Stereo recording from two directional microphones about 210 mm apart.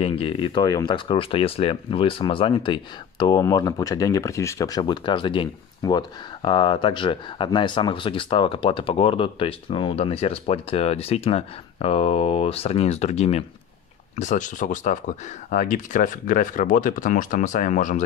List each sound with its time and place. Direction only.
0.0 s speech: 25° left (ahead or behind)